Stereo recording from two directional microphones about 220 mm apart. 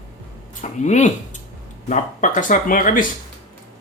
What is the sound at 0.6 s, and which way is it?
Speech, 30° left (ahead or behind).